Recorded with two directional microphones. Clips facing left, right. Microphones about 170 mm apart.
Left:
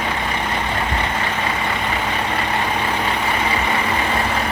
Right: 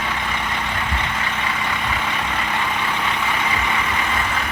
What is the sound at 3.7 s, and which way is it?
Vehicle, 35° left (ahead or behind).